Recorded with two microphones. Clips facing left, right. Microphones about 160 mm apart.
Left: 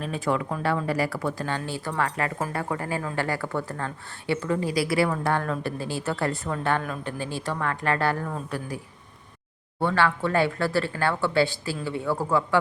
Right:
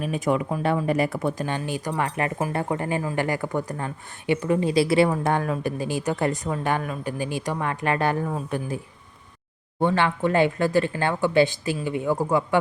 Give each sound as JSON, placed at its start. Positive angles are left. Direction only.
{"t": 0.0, "sound": "speech", "side_deg": -15}
{"t": 9.8, "sound": "speech", "side_deg": -20}